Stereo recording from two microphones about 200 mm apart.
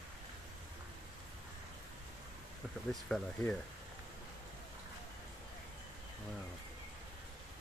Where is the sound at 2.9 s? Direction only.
5° left (ahead or behind).